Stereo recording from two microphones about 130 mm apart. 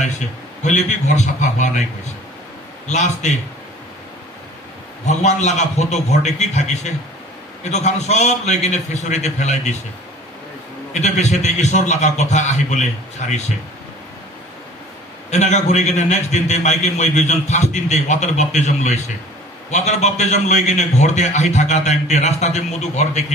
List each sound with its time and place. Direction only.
0.7 s a man's voice: 65° left (ahead or behind)
2.9 s a man's voice: 60° left (ahead or behind)
5.0 s a man's voice: 60° left (ahead or behind)
10.9 s a man's voice: 60° left (ahead or behind)
15.3 s a man's voice: 65° left (ahead or behind)